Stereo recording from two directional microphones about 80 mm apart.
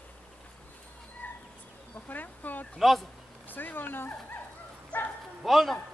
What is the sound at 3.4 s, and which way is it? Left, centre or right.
Speech, left.